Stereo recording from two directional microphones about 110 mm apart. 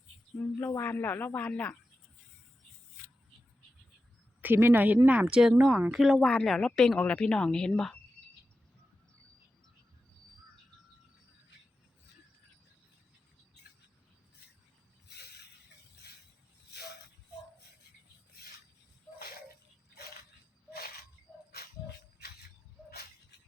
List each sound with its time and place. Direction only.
0.6 s speech: 25° left (ahead or behind)
4.4 s speech: 20° right (ahead or behind); by 7.9 s 5° left (ahead or behind)
21.3 s music: centre (ahead or behind)